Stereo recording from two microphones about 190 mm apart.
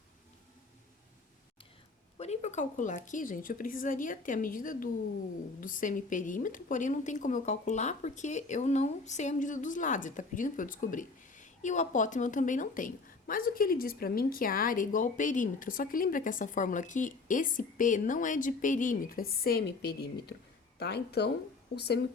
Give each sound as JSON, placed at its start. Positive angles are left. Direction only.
{"t": 2.1, "sound": "speech", "side_deg": 35}